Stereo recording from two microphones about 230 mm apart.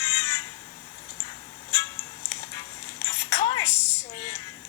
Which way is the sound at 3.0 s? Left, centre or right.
Centre.